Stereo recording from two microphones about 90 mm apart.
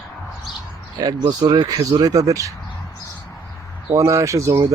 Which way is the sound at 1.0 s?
50° right (ahead or behind).